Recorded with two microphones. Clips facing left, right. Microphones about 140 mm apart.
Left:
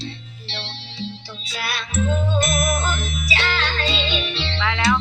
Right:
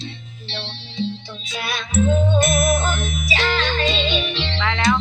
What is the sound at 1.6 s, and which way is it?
Music, 25° right (ahead or behind).